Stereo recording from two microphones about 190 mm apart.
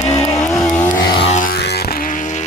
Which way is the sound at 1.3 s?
50° left (ahead or behind).